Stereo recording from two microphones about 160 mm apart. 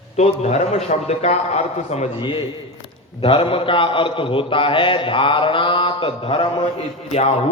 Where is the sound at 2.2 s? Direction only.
30° left (ahead or behind).